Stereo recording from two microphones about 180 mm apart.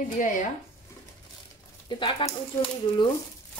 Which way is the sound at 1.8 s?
25° left (ahead or behind).